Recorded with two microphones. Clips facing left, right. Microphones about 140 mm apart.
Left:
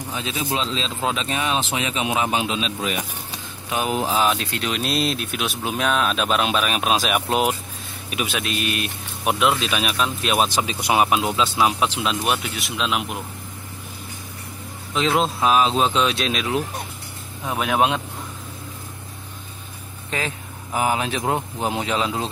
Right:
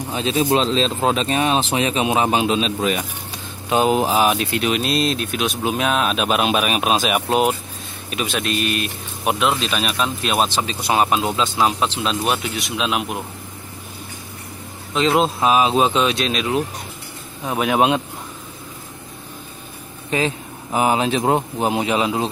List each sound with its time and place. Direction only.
0.1 s speech: 35° right (ahead or behind)
0.5 s a man's voice: 45° right (ahead or behind)
3.7 s speech: 25° right (ahead or behind); by 13.2 s 5° right (ahead or behind)
15.0 s speech: centre (ahead or behind)
20.1 s speech: 20° right (ahead or behind)
21.5 s speech: 15° right (ahead or behind)